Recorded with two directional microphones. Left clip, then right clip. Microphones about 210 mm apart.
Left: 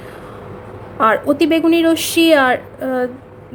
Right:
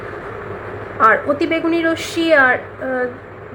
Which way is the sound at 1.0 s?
65° left (ahead or behind).